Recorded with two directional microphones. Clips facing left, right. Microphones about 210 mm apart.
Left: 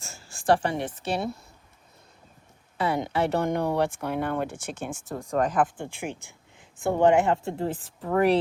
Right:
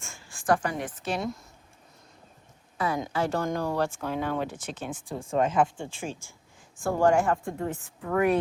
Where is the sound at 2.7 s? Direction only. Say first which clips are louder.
Left 3 dB; 25° left (ahead or behind).